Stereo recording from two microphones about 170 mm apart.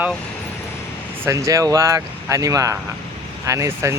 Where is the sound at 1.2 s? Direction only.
20° right (ahead or behind).